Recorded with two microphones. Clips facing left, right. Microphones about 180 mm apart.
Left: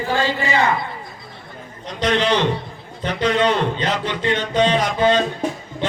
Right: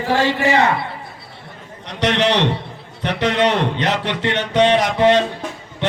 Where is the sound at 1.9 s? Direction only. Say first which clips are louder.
Right 1 dB; 70° right (ahead or behind).